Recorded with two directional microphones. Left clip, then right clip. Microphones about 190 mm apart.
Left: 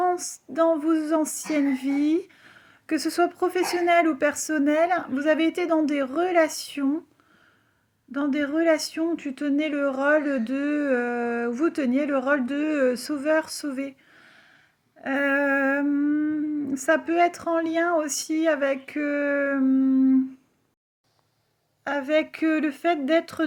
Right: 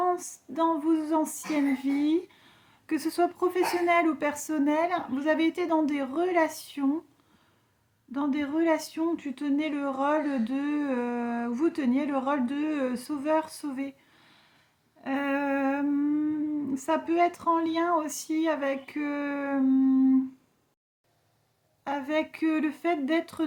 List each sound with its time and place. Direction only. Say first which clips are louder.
0.0 s female singing: left 3 dB; 15° left (ahead or behind)
8.1 s female singing: left 4 dB; 15° left (ahead or behind)
21.8 s female singing: left 6 dB; 15° left (ahead or behind)